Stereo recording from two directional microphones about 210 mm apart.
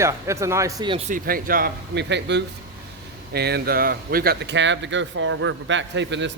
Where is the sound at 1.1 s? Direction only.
45° right (ahead or behind).